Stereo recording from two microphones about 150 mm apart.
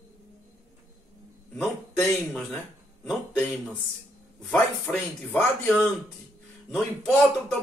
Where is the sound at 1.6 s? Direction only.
10° left (ahead or behind).